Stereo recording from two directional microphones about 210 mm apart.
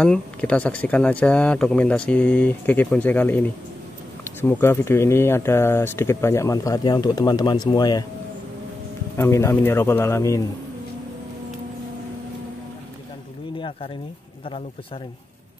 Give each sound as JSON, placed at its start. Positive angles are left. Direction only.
{"t": 0.0, "sound": "speech", "side_deg": 5}
{"t": 9.1, "sound": "speech", "side_deg": 15}